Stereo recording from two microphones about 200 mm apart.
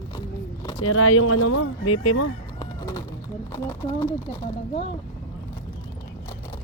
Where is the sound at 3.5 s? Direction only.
10° left (ahead or behind).